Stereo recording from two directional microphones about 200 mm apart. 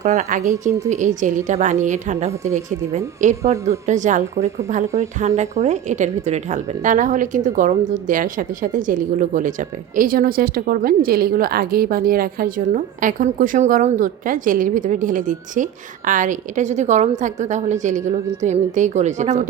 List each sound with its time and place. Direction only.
0.0 s a woman's voice: 40° right (ahead or behind)